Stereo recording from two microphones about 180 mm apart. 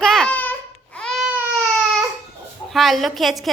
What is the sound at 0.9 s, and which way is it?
Baby cry, 5° left (ahead or behind).